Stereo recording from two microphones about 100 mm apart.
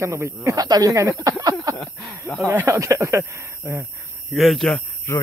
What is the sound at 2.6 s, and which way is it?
Speech, 35° right (ahead or behind).